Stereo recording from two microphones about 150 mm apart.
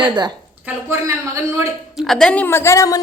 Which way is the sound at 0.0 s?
30° right (ahead or behind).